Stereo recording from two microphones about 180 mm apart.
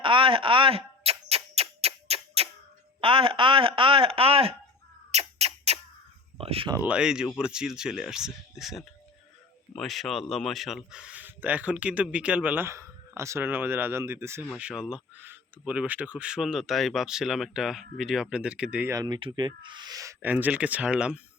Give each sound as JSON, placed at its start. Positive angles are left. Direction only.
{"t": 0.0, "sound": "a sound", "side_deg": -30}
{"t": 3.0, "sound": "speech", "side_deg": -30}
{"t": 5.1, "sound": "a sound", "side_deg": -35}
{"t": 6.3, "sound": "speech", "side_deg": -30}
{"t": 6.7, "sound": "speech", "side_deg": -5}
{"t": 18.9, "sound": "speech", "side_deg": -25}